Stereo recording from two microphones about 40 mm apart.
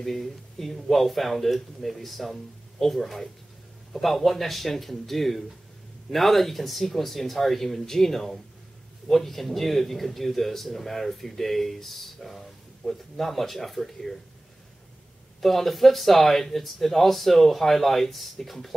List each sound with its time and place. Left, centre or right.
0.0 s a man's voice: centre
15.4 s a man's voice: centre